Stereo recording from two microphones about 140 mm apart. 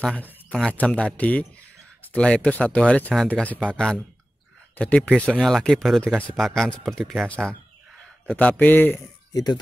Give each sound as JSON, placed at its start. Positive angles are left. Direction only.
{"t": 0.0, "sound": "a man's voice", "side_deg": 10}
{"t": 9.3, "sound": "speech", "side_deg": 30}